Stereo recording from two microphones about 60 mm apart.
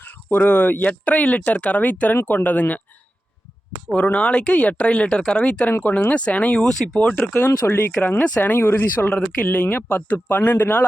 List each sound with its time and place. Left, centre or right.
0.0 s speech: left
3.9 s speech: left
6.6 s speech: centre
7.3 s speech: left
9.0 s speech: centre
9.6 s speech: left